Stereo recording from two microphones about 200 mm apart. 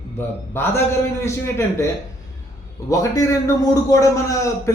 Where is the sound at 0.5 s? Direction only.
10° left (ahead or behind).